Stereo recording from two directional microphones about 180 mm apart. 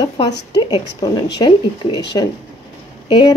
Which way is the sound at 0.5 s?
20° left (ahead or behind).